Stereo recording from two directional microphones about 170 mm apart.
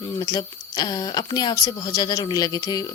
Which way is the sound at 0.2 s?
25° left (ahead or behind).